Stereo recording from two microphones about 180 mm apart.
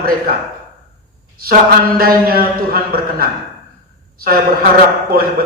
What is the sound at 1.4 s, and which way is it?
A man's voice, 55° right (ahead or behind).